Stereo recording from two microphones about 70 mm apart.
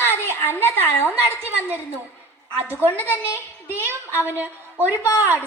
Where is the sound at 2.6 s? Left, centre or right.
Right.